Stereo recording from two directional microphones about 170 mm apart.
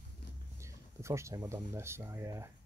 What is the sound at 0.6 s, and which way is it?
Speech, 15° right (ahead or behind).